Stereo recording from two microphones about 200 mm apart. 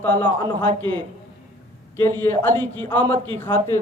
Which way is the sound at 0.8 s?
25° right (ahead or behind).